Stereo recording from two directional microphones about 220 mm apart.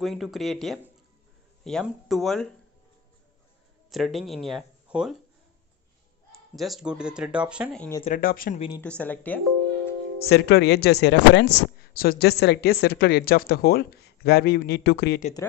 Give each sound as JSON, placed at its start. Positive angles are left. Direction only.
{"t": 0.0, "sound": "speech", "side_deg": 0}
{"t": 3.9, "sound": "speech", "side_deg": 0}
{"t": 6.5, "sound": "speech", "side_deg": 0}
{"t": 8.0, "sound": "speech", "side_deg": 40}
{"t": 8.5, "sound": "speech", "side_deg": 25}
{"t": 8.8, "sound": "speech", "side_deg": 5}
{"t": 10.2, "sound": "speech", "side_deg": 50}